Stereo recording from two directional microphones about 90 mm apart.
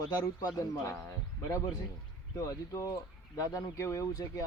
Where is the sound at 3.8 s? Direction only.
35° left (ahead or behind).